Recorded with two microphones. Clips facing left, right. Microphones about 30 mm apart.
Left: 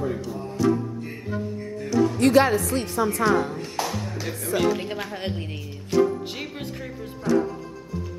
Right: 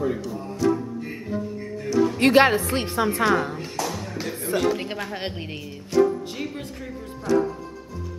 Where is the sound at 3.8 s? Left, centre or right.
Centre.